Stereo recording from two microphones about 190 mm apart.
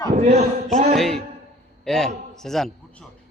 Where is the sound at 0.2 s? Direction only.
35° right (ahead or behind).